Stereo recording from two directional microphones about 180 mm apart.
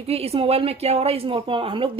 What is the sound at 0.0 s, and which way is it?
A woman's voice, 35° right (ahead or behind).